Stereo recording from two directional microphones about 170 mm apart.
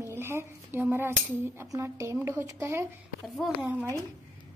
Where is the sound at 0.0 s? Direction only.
15° right (ahead or behind).